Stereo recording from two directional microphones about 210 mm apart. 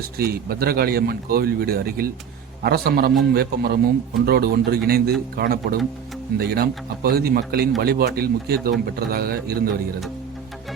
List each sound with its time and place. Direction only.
0.2 s speech: 45° right (ahead or behind)